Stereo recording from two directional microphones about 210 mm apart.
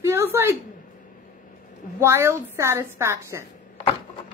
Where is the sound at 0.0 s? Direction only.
10° right (ahead or behind).